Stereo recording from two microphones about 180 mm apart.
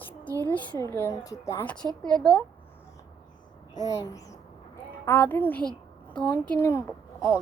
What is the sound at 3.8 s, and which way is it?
A woman's voice, 20° left (ahead or behind).